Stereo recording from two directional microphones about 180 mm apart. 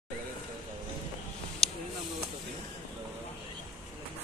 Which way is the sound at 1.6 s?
5° left (ahead or behind).